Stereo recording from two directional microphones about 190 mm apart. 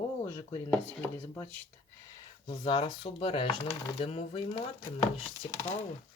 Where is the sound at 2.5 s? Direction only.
25° left (ahead or behind).